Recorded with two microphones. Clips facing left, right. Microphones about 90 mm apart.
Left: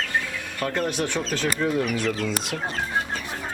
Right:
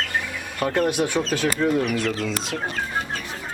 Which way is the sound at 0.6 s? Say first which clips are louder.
Right 4 dB; 15° right (ahead or behind).